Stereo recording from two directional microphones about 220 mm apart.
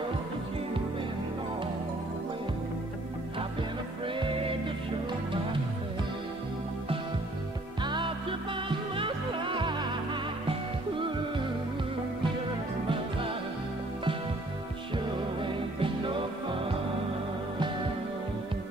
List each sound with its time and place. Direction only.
7.8 s music: 20° right (ahead or behind)
15.4 s music: 25° right (ahead or behind)